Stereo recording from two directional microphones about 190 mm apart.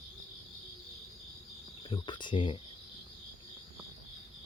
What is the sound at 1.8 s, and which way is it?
Cricket, 25° left (ahead or behind).